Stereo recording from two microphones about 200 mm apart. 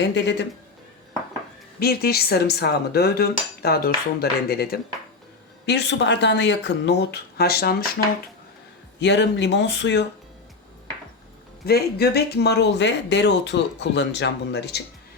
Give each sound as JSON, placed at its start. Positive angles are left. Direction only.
{"t": 0.0, "sound": "speech", "side_deg": 60}
{"t": 1.8, "sound": "cutlery", "side_deg": 50}
{"t": 5.6, "sound": "speech", "side_deg": 60}
{"t": 9.0, "sound": "speech", "side_deg": 60}
{"t": 11.6, "sound": "speech", "side_deg": 50}